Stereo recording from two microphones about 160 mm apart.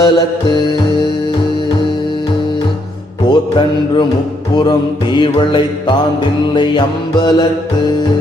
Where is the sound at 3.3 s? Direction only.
30° left (ahead or behind).